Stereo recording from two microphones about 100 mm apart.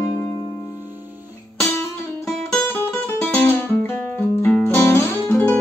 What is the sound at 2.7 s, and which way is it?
Guitar, 20° left (ahead or behind).